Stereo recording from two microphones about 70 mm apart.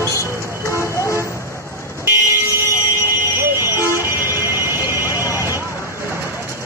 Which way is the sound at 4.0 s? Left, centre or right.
Right.